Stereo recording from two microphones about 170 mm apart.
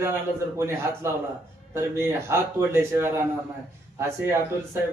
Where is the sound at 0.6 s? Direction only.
15° right (ahead or behind).